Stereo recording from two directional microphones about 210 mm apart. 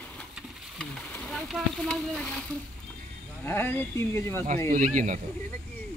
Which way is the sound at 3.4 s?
10° left (ahead or behind).